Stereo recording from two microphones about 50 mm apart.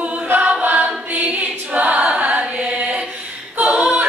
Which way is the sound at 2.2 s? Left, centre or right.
Right.